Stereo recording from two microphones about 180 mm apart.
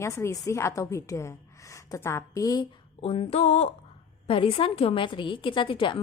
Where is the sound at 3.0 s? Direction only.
30° left (ahead or behind).